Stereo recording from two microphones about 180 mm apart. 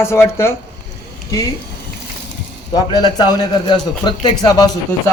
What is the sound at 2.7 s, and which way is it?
A man's voice, 25° left (ahead or behind).